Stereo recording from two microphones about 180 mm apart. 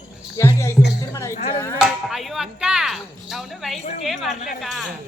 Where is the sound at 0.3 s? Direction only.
15° left (ahead or behind).